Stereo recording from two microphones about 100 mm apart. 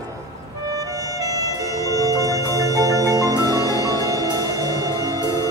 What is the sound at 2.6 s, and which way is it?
Marimba, 35° right (ahead or behind).